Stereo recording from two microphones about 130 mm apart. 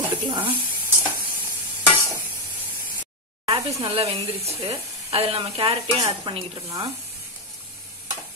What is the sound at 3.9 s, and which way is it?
A woman's voice, 50° right (ahead or behind).